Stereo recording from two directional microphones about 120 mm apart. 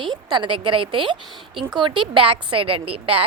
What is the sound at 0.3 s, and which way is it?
A woman's voice, 45° right (ahead or behind).